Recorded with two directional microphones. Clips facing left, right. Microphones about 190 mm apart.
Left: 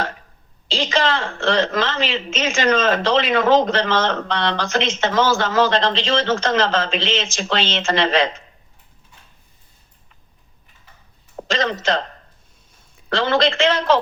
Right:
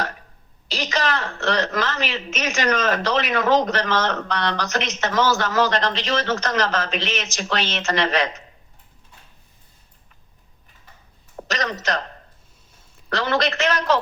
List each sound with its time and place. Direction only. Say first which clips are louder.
0.7 s a woman's voice: left 4 dB; 25° left (ahead or behind)
11.4 s a woman's voice: left 5 dB; 25° left (ahead or behind)
13.1 s a woman's voice: left 4 dB; 25° left (ahead or behind)